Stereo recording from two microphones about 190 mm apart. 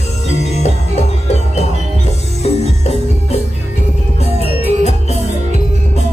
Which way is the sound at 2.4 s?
35° left (ahead or behind).